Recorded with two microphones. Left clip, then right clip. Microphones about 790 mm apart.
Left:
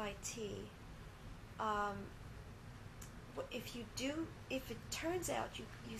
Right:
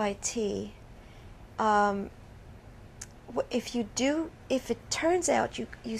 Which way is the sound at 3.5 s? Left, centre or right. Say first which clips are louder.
Right 15 dB; right.